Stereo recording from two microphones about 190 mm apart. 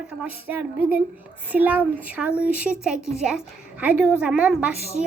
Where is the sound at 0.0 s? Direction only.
5° right (ahead or behind).